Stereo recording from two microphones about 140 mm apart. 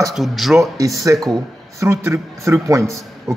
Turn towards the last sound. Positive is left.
turn(degrees=-20)  # may be behind; listen again after turning